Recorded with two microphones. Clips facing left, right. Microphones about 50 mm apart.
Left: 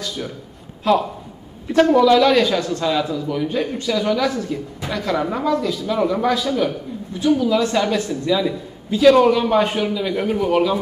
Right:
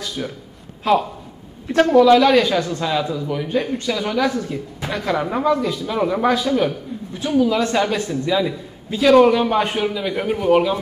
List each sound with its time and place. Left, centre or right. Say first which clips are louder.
0.2 s a man's voice: right 4 dB; centre
1.7 s a woman's voice: right 1 dB; centre